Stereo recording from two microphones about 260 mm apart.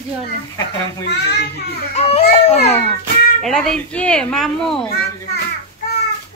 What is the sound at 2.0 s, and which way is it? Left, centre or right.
Speech, left.